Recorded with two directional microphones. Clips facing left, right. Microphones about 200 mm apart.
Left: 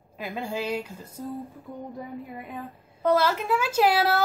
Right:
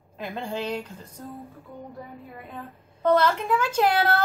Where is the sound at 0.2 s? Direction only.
5° left (ahead or behind).